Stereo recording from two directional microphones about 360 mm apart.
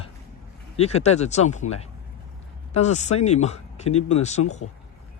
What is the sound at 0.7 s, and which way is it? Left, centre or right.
Speech, centre.